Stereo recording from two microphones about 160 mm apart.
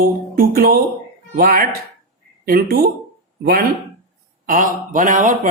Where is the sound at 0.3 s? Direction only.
65° right (ahead or behind).